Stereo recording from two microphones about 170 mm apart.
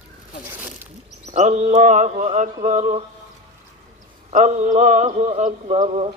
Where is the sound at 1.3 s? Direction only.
45° right (ahead or behind).